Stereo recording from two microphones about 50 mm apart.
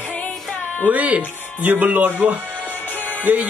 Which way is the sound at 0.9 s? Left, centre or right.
Right.